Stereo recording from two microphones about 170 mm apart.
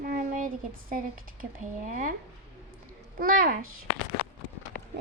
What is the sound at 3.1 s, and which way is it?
Speech, 55° right (ahead or behind).